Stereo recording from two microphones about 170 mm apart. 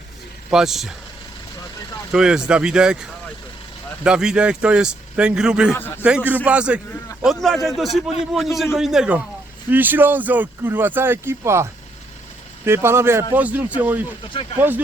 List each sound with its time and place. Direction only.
0.5 s a man's voice: 5° right (ahead or behind)
2.1 s a man's voice: 5° right (ahead or behind)
5.7 s a man's voice: 15° left (ahead or behind)
6.0 s a man's voice: 5° right (ahead or behind)